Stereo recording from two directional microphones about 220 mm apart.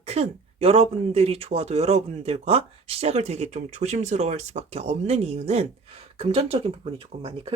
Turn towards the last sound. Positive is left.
turn(degrees=-25)  # may be behind; listen again after turning